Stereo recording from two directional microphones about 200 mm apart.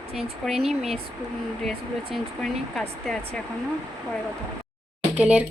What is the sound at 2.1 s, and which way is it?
Speech, centre (ahead or behind).